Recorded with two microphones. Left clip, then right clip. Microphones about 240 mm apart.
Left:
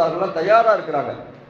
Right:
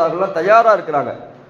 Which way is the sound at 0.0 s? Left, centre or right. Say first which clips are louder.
Right 3 dB; right.